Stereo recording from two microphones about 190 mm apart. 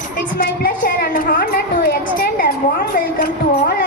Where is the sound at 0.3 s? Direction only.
50° left (ahead or behind).